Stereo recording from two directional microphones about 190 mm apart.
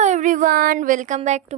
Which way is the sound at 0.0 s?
40° right (ahead or behind).